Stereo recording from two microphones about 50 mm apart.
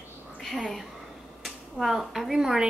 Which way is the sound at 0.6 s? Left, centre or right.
Centre.